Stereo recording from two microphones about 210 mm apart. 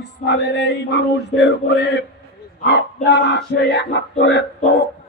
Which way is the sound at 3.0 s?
55° left (ahead or behind).